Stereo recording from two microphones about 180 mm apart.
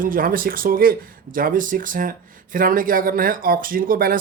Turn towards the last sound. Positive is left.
turn(degrees=-55)  # may be behind; listen again after turning